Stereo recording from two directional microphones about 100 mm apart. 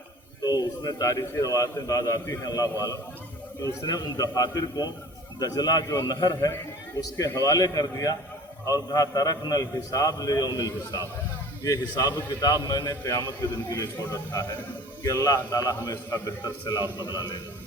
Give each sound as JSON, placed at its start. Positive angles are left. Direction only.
{"t": 0.9, "sound": "a man's voice", "side_deg": 40}
{"t": 3.6, "sound": "a man's voice", "side_deg": 35}
{"t": 13.4, "sound": "a man's voice", "side_deg": 25}
{"t": 15.0, "sound": "a man's voice", "side_deg": 35}